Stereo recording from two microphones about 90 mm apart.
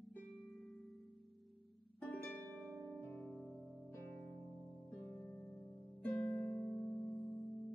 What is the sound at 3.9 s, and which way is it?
Music, 25° left (ahead or behind).